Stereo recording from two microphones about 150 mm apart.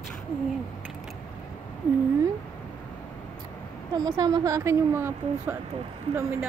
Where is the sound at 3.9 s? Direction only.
25° right (ahead or behind).